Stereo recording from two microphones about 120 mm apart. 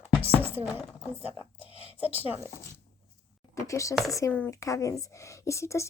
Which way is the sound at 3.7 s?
25° left (ahead or behind).